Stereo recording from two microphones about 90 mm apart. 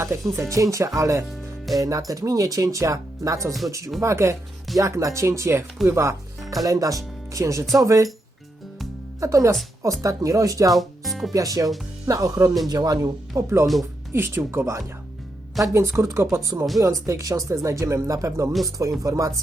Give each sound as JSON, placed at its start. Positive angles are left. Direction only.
{"t": 0.0, "sound": "speech", "side_deg": -30}
{"t": 9.2, "sound": "speech", "side_deg": -35}
{"t": 10.8, "sound": "music", "side_deg": 0}
{"t": 11.3, "sound": "speech", "side_deg": -40}
{"t": 14.1, "sound": "speech", "side_deg": -25}